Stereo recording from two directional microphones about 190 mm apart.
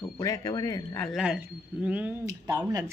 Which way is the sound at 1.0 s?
Centre (ahead or behind).